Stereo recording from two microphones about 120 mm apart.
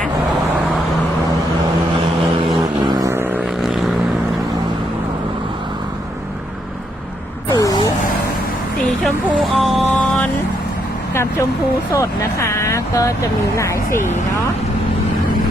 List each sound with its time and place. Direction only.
2.8 s vehicle: 30° right (ahead or behind)
7.5 s vehicle: 30° left (ahead or behind)
9.4 s music: centre (ahead or behind)
11.9 s speech: 25° left (ahead or behind)